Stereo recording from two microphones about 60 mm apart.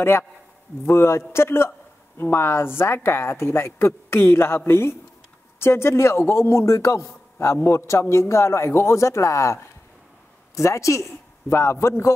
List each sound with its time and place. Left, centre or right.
0.8 s a woman's voice: left